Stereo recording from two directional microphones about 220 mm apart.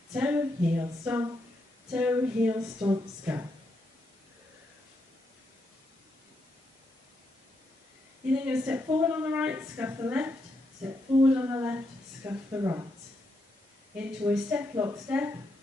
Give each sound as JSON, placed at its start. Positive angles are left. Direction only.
{"t": 0.1, "sound": "a woman's voice", "side_deg": -5}
{"t": 8.5, "sound": "a woman's voice", "side_deg": -10}
{"t": 13.9, "sound": "a woman's voice", "side_deg": -5}